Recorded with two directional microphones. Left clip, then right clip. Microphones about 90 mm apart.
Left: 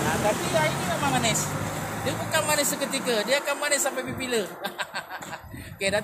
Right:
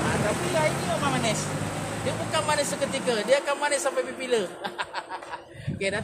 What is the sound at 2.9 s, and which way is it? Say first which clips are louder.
A man's voice: right 2 dB; 30° right (ahead or behind).